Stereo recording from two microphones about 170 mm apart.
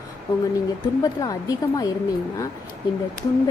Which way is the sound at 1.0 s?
20° left (ahead or behind).